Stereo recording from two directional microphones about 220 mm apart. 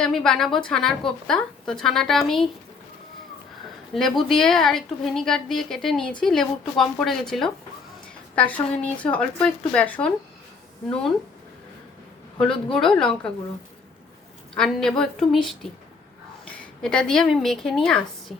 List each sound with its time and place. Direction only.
0.0 s a woman's voice: 5° left (ahead or behind)
3.9 s a woman's voice: centre (ahead or behind)
12.6 s a woman's voice: 5° left (ahead or behind)
14.5 s a woman's voice: 5° left (ahead or behind)